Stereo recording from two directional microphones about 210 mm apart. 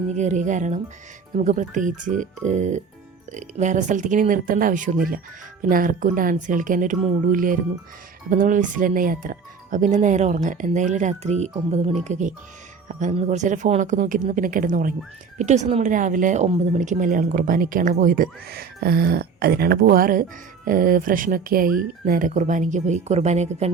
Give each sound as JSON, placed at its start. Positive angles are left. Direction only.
{"t": 0.1, "sound": "speech", "side_deg": -35}